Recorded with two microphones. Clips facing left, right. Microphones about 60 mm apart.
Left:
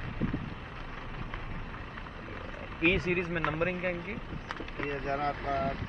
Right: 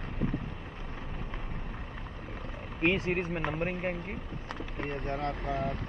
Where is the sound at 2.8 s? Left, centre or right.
Left.